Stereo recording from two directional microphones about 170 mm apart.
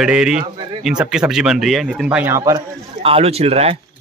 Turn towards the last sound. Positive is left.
turn(degrees=-35)  # may be behind; listen again after turning